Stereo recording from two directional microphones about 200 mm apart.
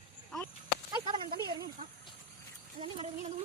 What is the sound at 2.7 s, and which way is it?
Speech, 25° right (ahead or behind).